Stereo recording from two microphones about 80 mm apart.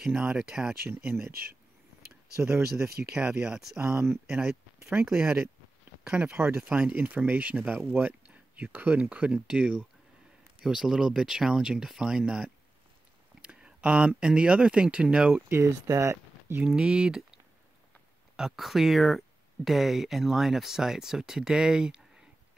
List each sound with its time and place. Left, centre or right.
0.4 s speech: centre
2.5 s speech: centre
5.1 s speech: right
6.0 s speech: centre
6.3 s speech: right
6.7 s speech: centre
15.3 s speech: right
16.6 s speech: centre